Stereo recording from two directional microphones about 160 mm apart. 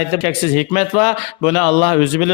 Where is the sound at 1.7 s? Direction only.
25° left (ahead or behind).